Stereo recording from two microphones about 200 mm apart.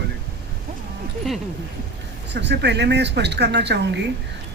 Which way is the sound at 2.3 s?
60° right (ahead or behind).